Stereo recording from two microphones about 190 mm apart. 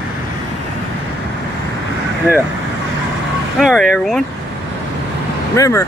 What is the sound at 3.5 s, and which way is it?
Speech, centre (ahead or behind).